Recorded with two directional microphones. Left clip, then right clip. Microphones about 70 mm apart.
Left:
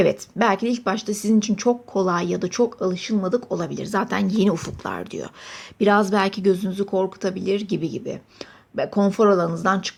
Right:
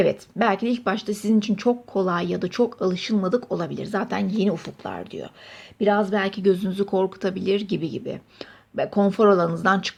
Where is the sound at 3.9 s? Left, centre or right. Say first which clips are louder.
Left 4 dB; left.